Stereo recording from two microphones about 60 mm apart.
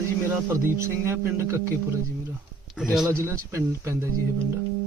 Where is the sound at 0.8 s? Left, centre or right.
Right.